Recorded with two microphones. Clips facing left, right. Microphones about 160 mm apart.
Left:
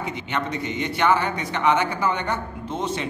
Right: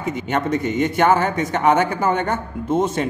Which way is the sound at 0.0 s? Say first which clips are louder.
Right 6 dB; 45° right (ahead or behind).